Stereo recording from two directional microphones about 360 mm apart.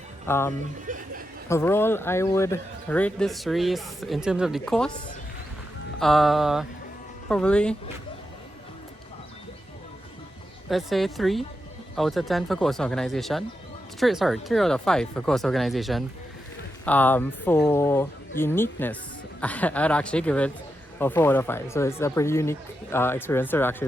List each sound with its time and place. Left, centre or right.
0.3 s speech: centre
0.9 s a sound: right
1.5 s speech: centre
6.0 s speech: centre
10.7 s speech: centre